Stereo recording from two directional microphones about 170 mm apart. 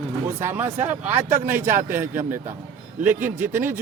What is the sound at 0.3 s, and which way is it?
Speech, 15° right (ahead or behind).